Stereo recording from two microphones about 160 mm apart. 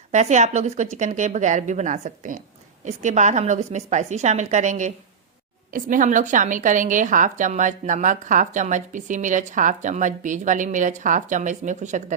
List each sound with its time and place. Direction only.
0.1 s a woman's voice: 45° right (ahead or behind)